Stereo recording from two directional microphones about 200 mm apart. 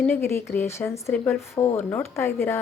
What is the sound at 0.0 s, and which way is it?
A woman's voice, 10° left (ahead or behind).